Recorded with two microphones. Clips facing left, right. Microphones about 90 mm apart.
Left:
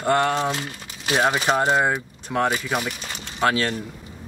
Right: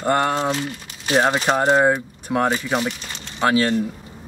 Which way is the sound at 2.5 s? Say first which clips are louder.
Right 3 dB; 10° left (ahead or behind).